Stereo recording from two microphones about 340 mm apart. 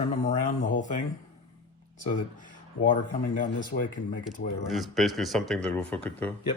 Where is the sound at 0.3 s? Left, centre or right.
Left.